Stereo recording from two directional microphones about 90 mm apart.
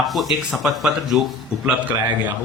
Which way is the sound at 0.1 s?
Centre (ahead or behind).